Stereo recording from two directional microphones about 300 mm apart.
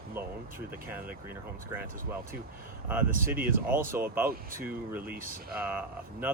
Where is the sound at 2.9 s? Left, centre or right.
Centre.